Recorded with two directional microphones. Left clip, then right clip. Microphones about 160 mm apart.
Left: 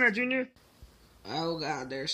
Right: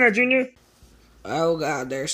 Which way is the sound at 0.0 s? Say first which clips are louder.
Right 9 dB; 10° right (ahead or behind).